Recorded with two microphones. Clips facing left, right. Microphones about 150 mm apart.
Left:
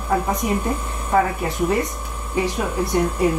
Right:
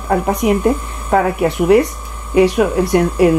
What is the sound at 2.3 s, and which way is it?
Speech, 80° right.